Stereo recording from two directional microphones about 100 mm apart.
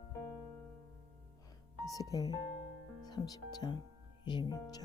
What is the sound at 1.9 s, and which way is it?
Speech, 35° left (ahead or behind).